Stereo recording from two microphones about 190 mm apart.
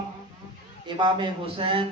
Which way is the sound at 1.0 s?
25° right (ahead or behind).